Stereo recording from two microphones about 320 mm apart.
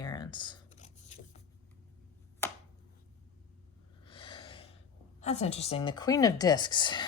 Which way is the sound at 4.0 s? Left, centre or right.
Centre.